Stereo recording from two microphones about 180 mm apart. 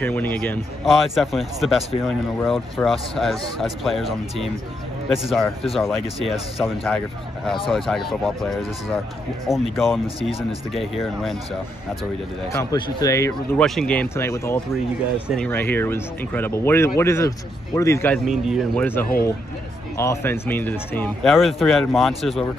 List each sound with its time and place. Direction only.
0.0 s speech: 10° left (ahead or behind)
12.7 s speech: 20° left (ahead or behind)
13.6 s speech: 5° left (ahead or behind)
14.7 s speech: 5° right (ahead or behind)
15.4 s speech: 10° left (ahead or behind)
18.1 s speech: centre (ahead or behind)
20.0 s speech: 15° left (ahead or behind)